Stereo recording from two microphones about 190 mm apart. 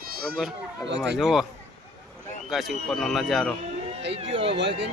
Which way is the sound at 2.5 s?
Centre (ahead or behind).